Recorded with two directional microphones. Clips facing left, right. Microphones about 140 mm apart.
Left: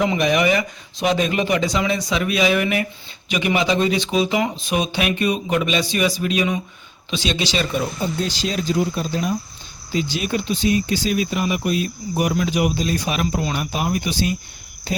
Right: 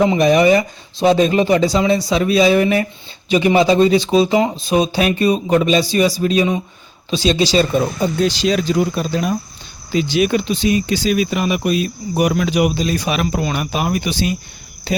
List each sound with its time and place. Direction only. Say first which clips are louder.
0.0 s speech: right 6 dB; 30° right (ahead or behind)
8.0 s speech: right 7 dB; 75° right (ahead or behind)